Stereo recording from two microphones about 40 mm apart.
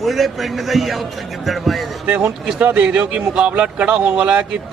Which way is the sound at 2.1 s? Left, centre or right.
Right.